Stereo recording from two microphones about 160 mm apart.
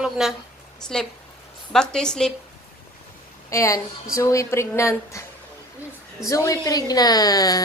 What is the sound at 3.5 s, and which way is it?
A woman's voice, 20° left (ahead or behind).